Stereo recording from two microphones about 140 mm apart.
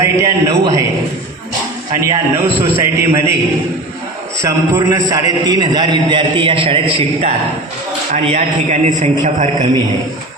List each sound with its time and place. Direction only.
0.0 s a man's voice: 20° right (ahead or behind)
2.0 s a man's voice: 20° right (ahead or behind)
4.4 s a man's voice: 20° right (ahead or behind); by 9.6 s 60° right (ahead or behind)